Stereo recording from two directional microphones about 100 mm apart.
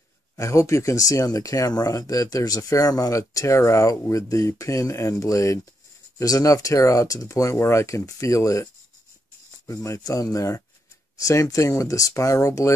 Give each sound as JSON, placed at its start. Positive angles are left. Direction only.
{"t": 0.4, "sound": "speech", "side_deg": 30}
{"t": 9.7, "sound": "speech", "side_deg": 35}